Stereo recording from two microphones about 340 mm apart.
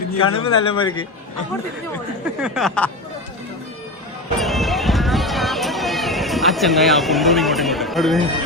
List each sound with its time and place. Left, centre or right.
0.2 s speech: left
0.6 s speech: centre
2.2 s speech: centre
4.4 s run: centre